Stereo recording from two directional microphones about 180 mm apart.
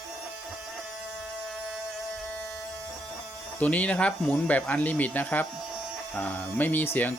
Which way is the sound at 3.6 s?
10° left (ahead or behind).